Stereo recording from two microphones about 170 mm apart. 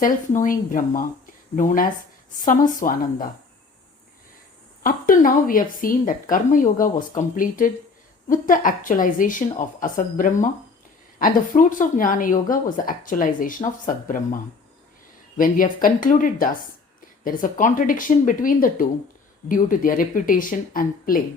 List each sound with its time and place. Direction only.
0.0 s a woman's voice: 50° left (ahead or behind)
4.8 s a woman's voice: 55° left (ahead or behind)
15.4 s a woman's voice: 55° left (ahead or behind)